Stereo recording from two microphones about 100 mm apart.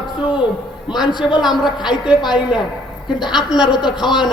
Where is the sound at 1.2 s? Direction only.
55° left (ahead or behind).